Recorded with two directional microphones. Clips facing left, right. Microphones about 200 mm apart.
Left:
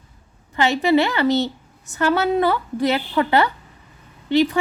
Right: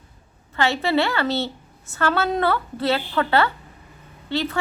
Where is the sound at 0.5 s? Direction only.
15° left (ahead or behind).